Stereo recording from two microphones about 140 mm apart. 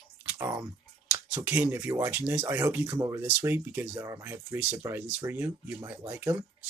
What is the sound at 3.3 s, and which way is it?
Speech, 15° right (ahead or behind).